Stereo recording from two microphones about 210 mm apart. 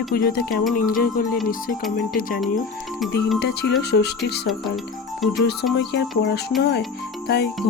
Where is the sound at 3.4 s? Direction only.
50° left (ahead or behind).